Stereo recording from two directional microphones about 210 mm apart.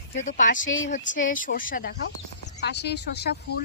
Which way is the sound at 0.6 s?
65° left (ahead or behind).